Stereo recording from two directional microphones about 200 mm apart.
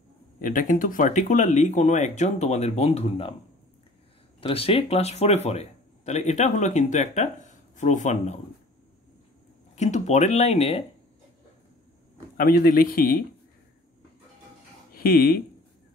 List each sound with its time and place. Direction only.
0.4 s speech: 40° left (ahead or behind)
4.4 s speech: 30° left (ahead or behind)
9.8 s speech: 35° left (ahead or behind)
12.4 s speech: 50° left (ahead or behind)
15.0 s speech: 50° left (ahead or behind)